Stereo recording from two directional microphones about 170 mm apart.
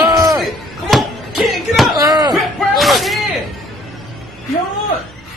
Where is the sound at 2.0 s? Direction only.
20° right (ahead or behind).